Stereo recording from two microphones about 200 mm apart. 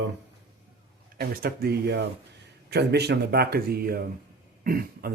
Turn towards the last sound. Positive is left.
turn(degrees=-45)  # may be behind; listen again after turning